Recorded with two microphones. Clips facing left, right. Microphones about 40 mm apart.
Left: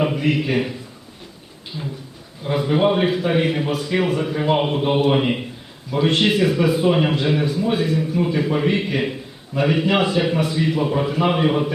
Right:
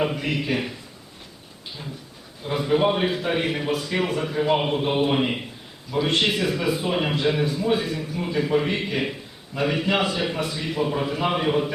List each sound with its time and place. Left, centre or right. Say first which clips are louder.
0.0 s a man's voice: left 5 dB; centre
1.7 s speech: left 8 dB; left
2.4 s a man's voice: left 3 dB; centre